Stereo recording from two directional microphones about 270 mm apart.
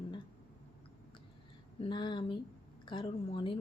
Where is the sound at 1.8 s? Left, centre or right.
Centre.